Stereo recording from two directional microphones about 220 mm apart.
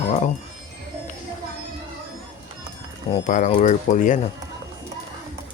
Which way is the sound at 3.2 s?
35° left (ahead or behind).